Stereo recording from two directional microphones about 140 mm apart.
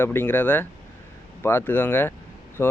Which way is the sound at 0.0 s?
15° left (ahead or behind).